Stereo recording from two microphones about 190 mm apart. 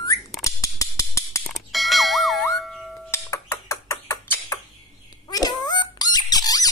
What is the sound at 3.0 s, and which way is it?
Music, 15° left (ahead or behind).